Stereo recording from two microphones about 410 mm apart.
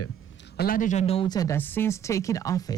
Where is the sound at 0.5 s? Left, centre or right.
Left.